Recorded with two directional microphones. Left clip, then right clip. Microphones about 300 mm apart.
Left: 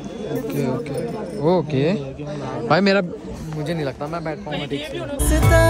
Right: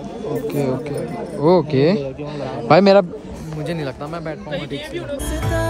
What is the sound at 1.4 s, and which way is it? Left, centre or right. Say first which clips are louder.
Speech: right 4 dB; right.